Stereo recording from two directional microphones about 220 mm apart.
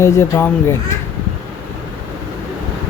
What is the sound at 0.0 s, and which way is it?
Speech, 10° left (ahead or behind).